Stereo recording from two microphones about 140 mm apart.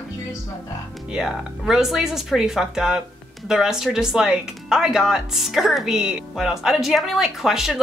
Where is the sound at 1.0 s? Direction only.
5° right (ahead or behind).